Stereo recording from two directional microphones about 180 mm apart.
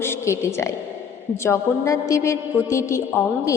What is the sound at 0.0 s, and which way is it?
A woman's voice, 15° left (ahead or behind).